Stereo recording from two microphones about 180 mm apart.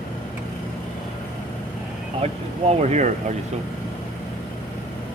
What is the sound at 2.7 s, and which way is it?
Speech, 40° right (ahead or behind).